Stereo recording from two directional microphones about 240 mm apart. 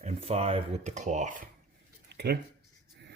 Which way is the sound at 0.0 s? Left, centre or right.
Right.